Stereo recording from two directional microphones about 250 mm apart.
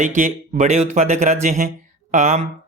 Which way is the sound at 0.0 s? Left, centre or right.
Right.